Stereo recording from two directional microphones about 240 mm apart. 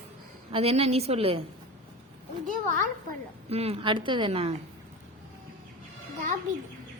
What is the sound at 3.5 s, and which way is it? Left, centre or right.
A woman's voice, right.